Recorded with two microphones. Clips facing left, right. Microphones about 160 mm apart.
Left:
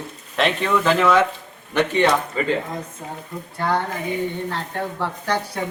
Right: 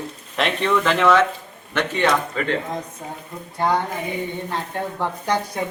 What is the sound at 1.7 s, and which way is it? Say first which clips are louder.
Speech: left 3 dB; 15° left (ahead or behind).